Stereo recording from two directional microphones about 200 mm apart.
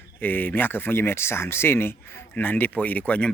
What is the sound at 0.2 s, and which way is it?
Speech, 10° left (ahead or behind).